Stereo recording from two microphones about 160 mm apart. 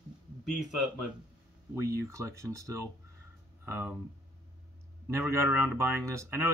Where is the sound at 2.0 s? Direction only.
20° right (ahead or behind).